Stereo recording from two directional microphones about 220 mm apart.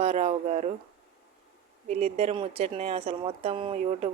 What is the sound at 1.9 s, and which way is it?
A woman's voice, 30° right (ahead or behind).